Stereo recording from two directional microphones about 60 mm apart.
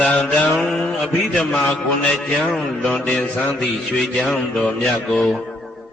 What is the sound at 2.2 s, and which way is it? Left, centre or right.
Speech, centre.